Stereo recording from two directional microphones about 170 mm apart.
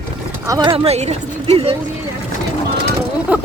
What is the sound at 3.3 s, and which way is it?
Speech, 10° right (ahead or behind).